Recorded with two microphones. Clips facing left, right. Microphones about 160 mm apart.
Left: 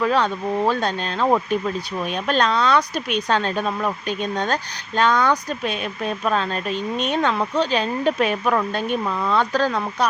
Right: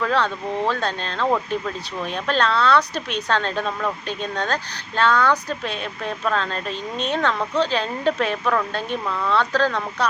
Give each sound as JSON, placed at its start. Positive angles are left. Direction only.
{"t": 0.0, "sound": "speech", "side_deg": 15}